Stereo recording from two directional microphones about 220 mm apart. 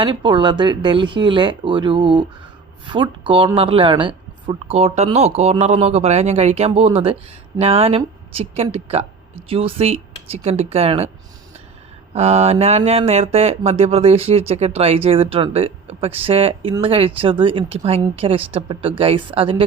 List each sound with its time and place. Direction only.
0.0 s speech: 20° right (ahead or behind)
12.1 s speech: 30° right (ahead or behind)